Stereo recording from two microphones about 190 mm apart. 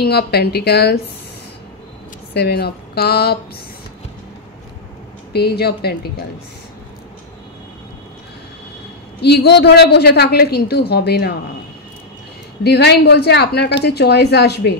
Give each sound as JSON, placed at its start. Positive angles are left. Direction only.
{"t": 0.0, "sound": "a woman's voice", "side_deg": 60}
{"t": 2.3, "sound": "a woman's voice", "side_deg": 60}
{"t": 5.3, "sound": "a woman's voice", "side_deg": 55}
{"t": 9.2, "sound": "a woman's voice", "side_deg": 60}
{"t": 12.6, "sound": "a woman's voice", "side_deg": 60}